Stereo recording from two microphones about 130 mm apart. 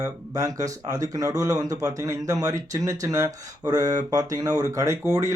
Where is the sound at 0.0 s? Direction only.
25° right (ahead or behind).